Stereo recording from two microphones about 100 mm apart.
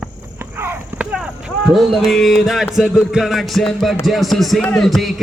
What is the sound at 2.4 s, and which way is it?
Speech, centre (ahead or behind).